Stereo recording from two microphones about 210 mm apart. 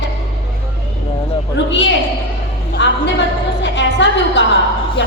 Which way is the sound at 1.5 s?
55° left (ahead or behind).